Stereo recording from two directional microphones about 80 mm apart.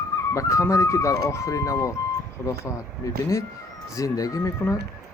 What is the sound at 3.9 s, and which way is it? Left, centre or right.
Speech, left.